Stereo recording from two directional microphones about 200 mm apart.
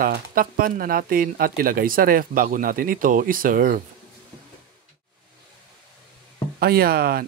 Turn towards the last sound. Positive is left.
turn(degrees=-50)  # may be behind; listen again after turning